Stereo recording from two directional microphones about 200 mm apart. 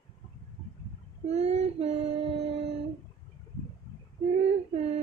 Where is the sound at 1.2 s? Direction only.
35° right (ahead or behind).